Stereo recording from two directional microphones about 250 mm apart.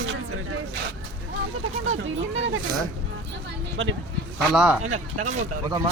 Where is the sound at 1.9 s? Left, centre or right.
Right.